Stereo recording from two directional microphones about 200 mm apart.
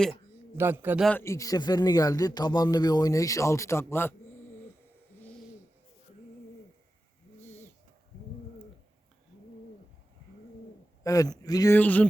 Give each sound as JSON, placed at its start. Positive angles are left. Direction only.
{"t": 0.5, "sound": "a man's voice", "side_deg": -10}
{"t": 1.0, "sound": "speech", "side_deg": 10}
{"t": 11.0, "sound": "speech", "side_deg": 15}